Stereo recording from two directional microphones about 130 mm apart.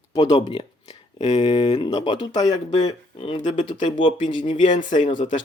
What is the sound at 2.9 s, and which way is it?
Speech, 45° left (ahead or behind).